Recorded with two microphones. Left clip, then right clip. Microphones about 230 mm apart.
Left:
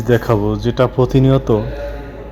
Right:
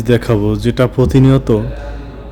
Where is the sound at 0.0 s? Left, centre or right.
Right.